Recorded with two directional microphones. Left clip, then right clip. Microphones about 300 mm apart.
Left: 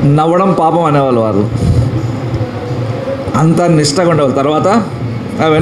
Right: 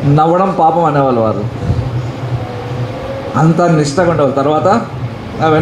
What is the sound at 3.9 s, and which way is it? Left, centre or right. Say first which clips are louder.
Speech: left 1 dB; left.